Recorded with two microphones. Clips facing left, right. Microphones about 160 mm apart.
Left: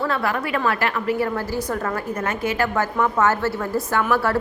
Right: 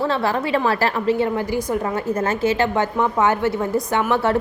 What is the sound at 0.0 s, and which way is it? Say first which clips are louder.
A woman's voice: right 3 dB; 30° right (ahead or behind).